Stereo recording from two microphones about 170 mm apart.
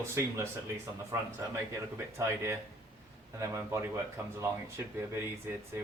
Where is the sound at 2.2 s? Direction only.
15° right (ahead or behind).